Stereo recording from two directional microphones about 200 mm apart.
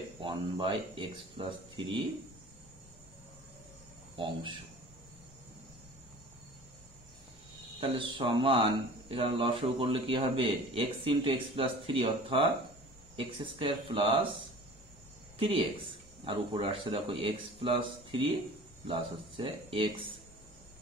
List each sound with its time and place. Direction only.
0.2 s speech: 25° right (ahead or behind)
4.2 s speech: 25° right (ahead or behind)
7.8 s speech: 25° right (ahead or behind)
15.3 s speech: 25° right (ahead or behind)